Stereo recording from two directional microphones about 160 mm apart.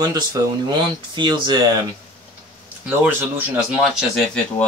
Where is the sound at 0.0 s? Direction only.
25° right (ahead or behind).